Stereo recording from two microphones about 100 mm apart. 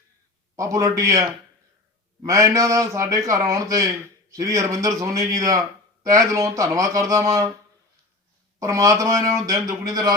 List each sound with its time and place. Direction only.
0.5 s a man's voice: 35° right (ahead or behind)
8.5 s a man's voice: 35° right (ahead or behind)